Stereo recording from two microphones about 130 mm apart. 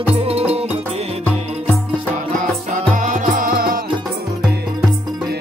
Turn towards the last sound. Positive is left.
turn(degrees=-90)